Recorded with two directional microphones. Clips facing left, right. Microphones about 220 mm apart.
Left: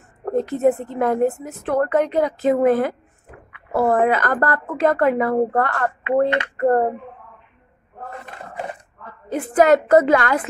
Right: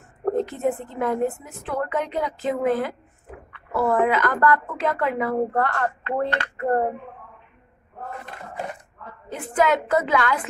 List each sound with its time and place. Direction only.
0.5 s a woman's voice: 40° left (ahead or behind)
9.3 s speech: 40° left (ahead or behind)